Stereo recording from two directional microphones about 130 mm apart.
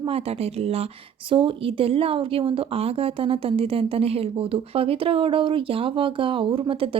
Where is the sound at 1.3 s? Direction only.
40° right (ahead or behind).